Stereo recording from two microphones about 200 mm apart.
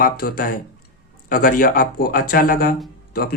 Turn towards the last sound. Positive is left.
turn(degrees=50)  # may be behind; listen again after turning